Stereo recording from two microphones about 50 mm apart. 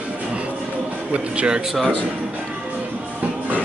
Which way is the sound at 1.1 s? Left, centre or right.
Right.